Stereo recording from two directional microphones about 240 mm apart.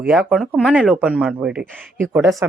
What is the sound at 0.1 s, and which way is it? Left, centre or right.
Speech, centre.